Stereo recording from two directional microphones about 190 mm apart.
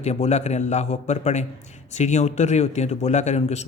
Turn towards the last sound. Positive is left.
turn(degrees=35)  # may be behind; listen again after turning